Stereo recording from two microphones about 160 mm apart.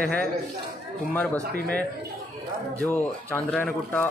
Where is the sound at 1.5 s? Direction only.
80° right.